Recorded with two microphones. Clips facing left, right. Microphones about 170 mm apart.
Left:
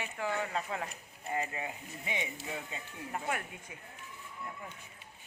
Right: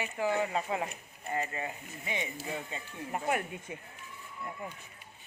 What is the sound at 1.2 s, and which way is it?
Speech, 10° left (ahead or behind).